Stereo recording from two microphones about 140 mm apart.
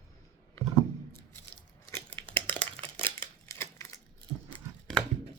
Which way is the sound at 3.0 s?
20° left (ahead or behind).